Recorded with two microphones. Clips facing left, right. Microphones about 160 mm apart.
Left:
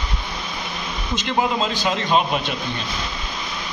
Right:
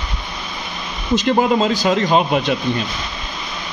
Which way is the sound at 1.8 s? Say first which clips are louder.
Right 4 dB; 40° right (ahead or behind).